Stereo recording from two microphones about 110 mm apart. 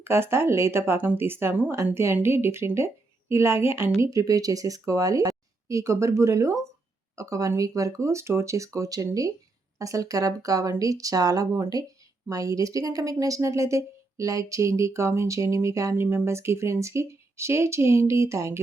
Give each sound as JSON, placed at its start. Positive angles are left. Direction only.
{"t": 0.0, "sound": "speech", "side_deg": -20}